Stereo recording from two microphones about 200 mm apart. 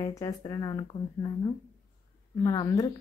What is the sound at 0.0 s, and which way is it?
Speech, 15° left (ahead or behind).